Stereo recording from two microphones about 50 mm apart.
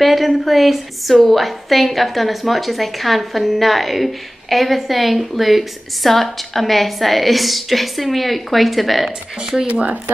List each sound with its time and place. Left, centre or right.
0.0 s a woman's voice: centre
9.7 s speech: right